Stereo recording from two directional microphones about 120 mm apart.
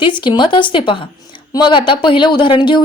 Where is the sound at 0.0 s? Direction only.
40° left (ahead or behind).